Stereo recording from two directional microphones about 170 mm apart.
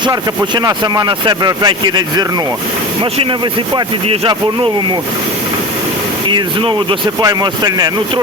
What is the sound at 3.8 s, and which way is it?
Speech, 30° right (ahead or behind).